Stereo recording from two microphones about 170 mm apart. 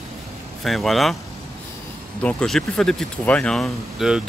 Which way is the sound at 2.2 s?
5° left (ahead or behind).